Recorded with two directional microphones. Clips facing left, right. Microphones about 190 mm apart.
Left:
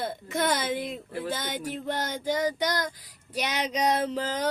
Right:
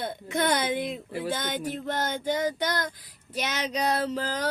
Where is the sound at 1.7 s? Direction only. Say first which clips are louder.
Even; 10° left (ahead or behind).